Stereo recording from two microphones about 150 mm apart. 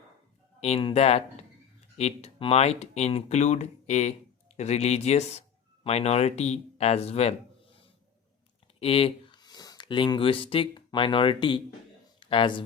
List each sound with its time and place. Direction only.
0.6 s speech: 40° left (ahead or behind)
8.8 s speech: 40° left (ahead or behind)